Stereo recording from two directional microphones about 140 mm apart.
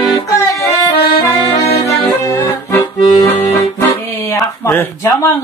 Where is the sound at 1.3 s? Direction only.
20° left (ahead or behind).